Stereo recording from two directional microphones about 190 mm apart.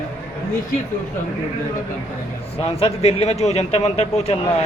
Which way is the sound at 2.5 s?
30° left (ahead or behind).